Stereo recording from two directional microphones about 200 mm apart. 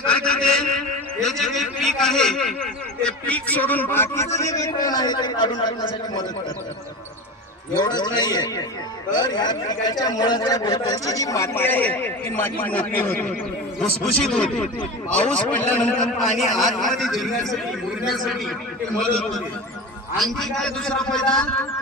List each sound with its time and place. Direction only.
0.1 s a sound: 5° left (ahead or behind)
3.0 s speech: 5° left (ahead or behind); by 5.7 s 20° left (ahead or behind)
7.8 s a man's voice: 20° left (ahead or behind); by 21.5 s 5° left (ahead or behind)